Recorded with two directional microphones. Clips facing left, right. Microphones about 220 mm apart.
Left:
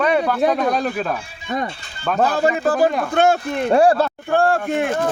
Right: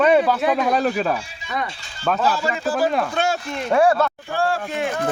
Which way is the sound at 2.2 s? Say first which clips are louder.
Left 9 dB; 55° left (ahead or behind).